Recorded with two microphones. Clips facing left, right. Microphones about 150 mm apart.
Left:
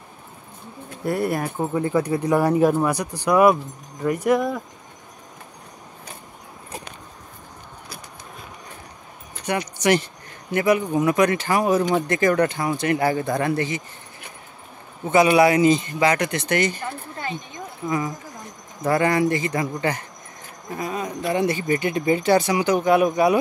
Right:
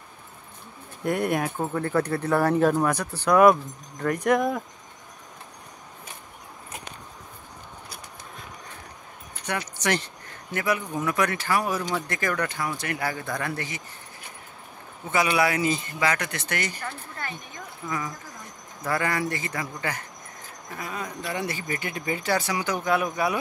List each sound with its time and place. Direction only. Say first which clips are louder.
1.0 s speech: left 2 dB; 5° left (ahead or behind)
9.5 s speech: left 7 dB; 15° left (ahead or behind)
15.3 s speech: left 8 dB; 20° left (ahead or behind)